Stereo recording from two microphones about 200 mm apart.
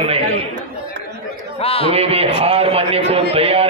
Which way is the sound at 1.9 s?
30° right (ahead or behind).